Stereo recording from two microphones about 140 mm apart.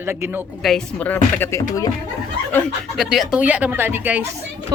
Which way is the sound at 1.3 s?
15° left (ahead or behind).